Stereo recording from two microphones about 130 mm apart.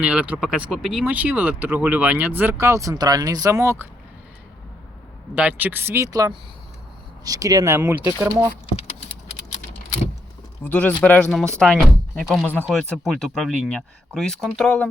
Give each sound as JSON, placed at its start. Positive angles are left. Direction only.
{"t": 0.0, "sound": "speech", "side_deg": -10}
{"t": 5.3, "sound": "speech", "side_deg": -10}
{"t": 10.6, "sound": "speech", "side_deg": 10}